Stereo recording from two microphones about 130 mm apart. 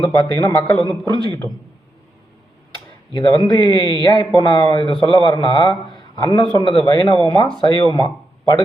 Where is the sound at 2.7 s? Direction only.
35° left (ahead or behind).